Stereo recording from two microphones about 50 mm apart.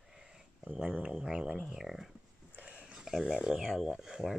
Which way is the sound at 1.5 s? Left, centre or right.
Centre.